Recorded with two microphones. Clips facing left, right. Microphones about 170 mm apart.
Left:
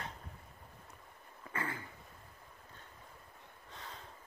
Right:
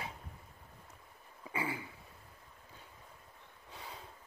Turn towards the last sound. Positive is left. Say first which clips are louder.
# right 1 dB
turn(degrees=-10)  # may be behind; listen again after turning